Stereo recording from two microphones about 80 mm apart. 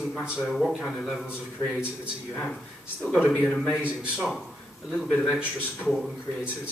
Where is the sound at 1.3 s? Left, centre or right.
Centre.